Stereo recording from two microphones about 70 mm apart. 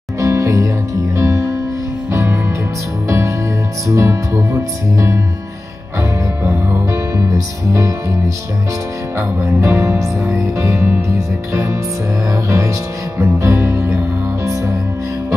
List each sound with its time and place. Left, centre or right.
0.2 s music: right
6.4 s music: right
9.4 s music: right